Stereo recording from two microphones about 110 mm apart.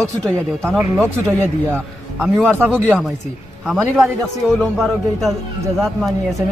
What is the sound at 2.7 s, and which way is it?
Speech, 10° left (ahead or behind).